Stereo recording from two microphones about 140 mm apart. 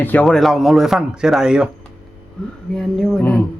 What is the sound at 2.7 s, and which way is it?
Speech, 5° left (ahead or behind).